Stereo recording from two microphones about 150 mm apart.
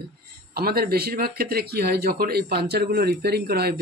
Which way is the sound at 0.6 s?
90° right.